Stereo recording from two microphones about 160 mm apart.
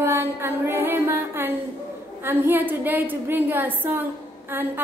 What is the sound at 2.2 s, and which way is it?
A woman's voice, 15° right (ahead or behind).